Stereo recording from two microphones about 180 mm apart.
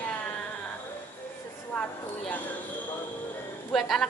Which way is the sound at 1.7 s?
10° left (ahead or behind).